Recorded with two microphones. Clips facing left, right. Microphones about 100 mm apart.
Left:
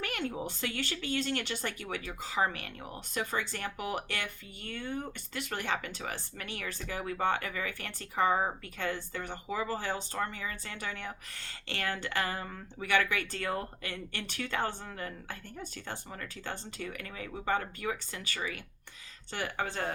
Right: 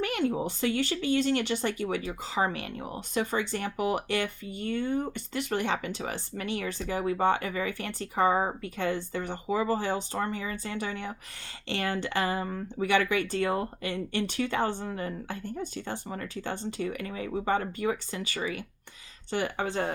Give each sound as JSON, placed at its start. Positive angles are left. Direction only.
{"t": 0.0, "sound": "a sound", "side_deg": -20}
{"t": 0.4, "sound": "speech", "side_deg": -20}
{"t": 5.3, "sound": "speech", "side_deg": -25}